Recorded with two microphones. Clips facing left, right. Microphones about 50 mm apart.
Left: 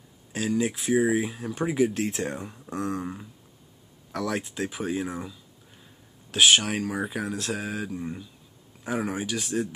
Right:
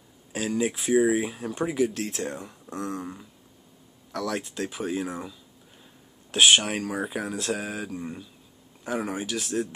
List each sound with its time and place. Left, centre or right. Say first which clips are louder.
0.3 s speech: even; centre
1.6 s speech: left 1 dB; centre
1.9 s speech: left 2 dB; centre